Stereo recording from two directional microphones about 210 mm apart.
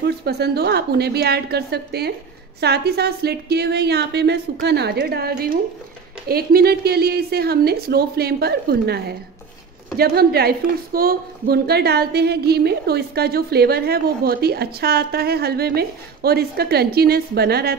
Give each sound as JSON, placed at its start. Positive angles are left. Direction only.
{"t": 0.0, "sound": "a woman's voice", "side_deg": -50}